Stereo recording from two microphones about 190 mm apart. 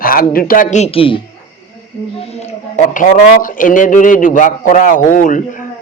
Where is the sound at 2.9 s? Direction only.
45° left (ahead or behind).